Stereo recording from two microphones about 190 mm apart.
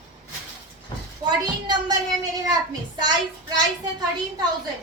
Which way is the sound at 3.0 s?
20° right (ahead or behind).